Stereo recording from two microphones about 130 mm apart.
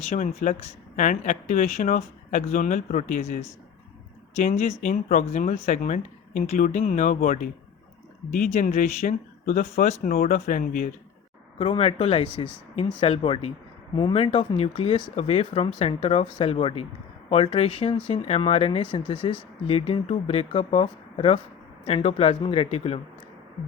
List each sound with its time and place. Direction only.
0.1 s speech: 70° left (ahead or behind)
4.4 s speech: 60° left (ahead or behind)
4.8 s speech: 85° left
5.2 s speech: 65° left (ahead or behind); by 7.3 s 80° left
8.4 s speech: 70° left (ahead or behind); by 10.8 s 90° left
11.6 s speech: 45° left (ahead or behind)
15.1 s speech: 50° left (ahead or behind)